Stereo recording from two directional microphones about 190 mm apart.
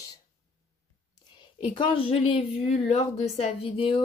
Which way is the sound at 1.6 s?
25° left (ahead or behind).